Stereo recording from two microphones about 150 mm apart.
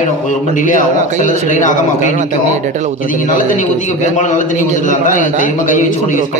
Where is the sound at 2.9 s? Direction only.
65° left (ahead or behind).